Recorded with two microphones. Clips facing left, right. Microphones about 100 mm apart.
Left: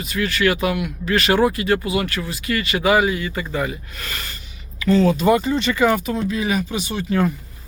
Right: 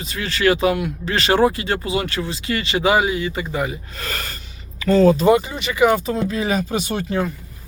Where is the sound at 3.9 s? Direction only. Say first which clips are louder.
Right 3 dB; 40° right (ahead or behind).